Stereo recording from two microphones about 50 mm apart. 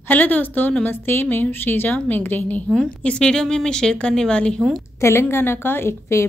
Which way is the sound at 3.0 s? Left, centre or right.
Centre.